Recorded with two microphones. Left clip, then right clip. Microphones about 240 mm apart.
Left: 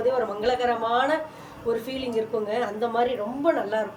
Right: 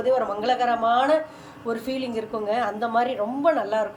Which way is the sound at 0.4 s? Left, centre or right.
Centre.